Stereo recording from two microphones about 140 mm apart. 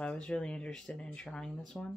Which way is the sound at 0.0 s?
5° left (ahead or behind).